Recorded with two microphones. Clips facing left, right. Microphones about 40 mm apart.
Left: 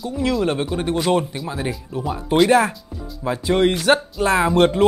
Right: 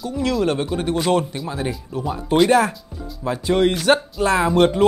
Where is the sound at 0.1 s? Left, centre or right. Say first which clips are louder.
Even; left.